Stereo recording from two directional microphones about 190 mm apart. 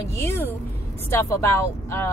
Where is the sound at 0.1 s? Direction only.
15° left (ahead or behind).